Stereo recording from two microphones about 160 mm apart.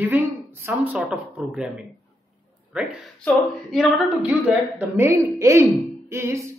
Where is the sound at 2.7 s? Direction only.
Centre (ahead or behind).